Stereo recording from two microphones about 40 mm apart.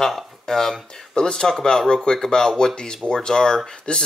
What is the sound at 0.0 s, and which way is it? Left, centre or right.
Speech, centre.